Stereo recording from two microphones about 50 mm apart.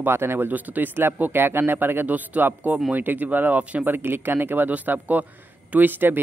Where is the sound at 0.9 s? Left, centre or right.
Right.